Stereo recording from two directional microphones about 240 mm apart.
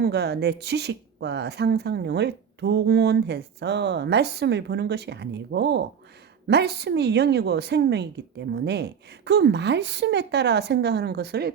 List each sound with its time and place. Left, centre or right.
0.0 s speech: right